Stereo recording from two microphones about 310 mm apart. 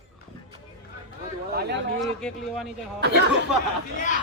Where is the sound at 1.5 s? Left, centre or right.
Right.